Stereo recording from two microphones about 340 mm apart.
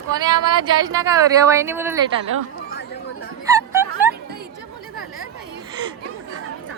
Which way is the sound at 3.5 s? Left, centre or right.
Centre.